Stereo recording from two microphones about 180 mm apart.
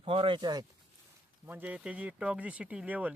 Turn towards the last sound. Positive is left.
turn(degrees=-10)  # may be behind; listen again after turning